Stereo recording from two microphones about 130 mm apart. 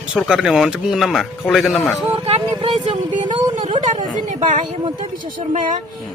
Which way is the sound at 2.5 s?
40° right (ahead or behind).